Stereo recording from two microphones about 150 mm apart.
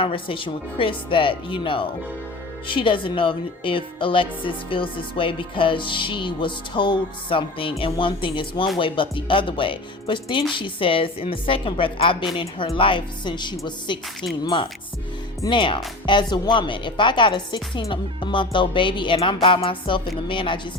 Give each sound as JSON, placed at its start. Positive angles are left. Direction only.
{"t": 0.0, "sound": "speech", "side_deg": 35}